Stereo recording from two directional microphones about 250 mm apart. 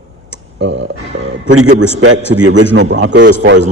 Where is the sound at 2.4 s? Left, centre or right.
Right.